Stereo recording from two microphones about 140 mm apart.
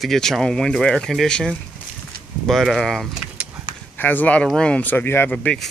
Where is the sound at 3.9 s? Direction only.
15° left (ahead or behind).